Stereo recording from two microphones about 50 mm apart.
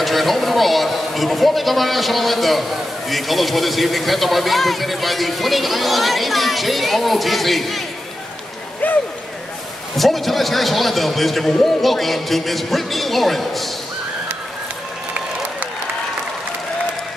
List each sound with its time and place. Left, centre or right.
0.0 s a man's voice: centre
8.8 s a sound: left
9.9 s a man's voice: centre